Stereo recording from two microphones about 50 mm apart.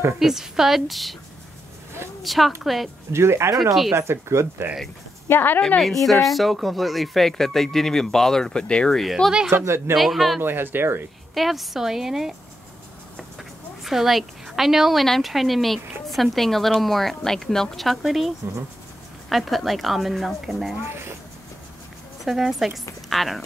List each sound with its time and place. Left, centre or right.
0.2 s a woman's voice: centre
2.2 s a woman's voice: centre
3.1 s speech: right
5.3 s a woman's voice: left
5.8 s a woman's voice: centre
8.9 s a woman's voice: centre
9.5 s speech: right
9.9 s a woman's voice: centre
10.4 s speech: right
11.3 s a woman's voice: centre
13.4 s a sound: centre
15.0 s a woman's voice: centre
22.2 s a woman's voice: centre